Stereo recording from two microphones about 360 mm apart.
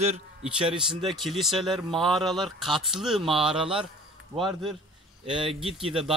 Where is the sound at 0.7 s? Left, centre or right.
Centre.